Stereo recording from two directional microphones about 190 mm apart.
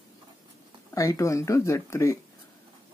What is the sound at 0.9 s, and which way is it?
Speech, 15° left (ahead or behind).